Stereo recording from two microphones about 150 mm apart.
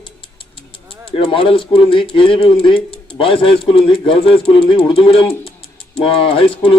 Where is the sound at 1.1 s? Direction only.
35° left (ahead or behind).